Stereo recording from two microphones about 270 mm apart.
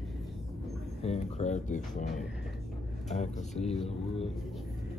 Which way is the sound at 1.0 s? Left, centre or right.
Left.